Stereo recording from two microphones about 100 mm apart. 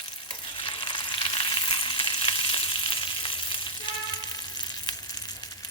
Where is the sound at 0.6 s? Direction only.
55° left (ahead or behind).